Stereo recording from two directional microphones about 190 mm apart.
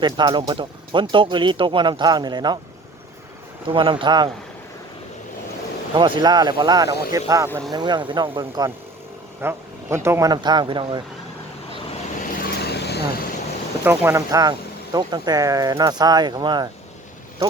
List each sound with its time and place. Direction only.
0.0 s speech: 25° right (ahead or behind)
3.7 s speech: 25° right (ahead or behind)
5.9 s speech: 25° right (ahead or behind)
12.2 s vehicle: 55° left (ahead or behind)
13.8 s speech: 10° right (ahead or behind)